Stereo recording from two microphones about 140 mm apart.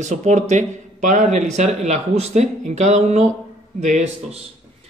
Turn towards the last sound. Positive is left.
turn(degrees=-55)  # may be behind; listen again after turning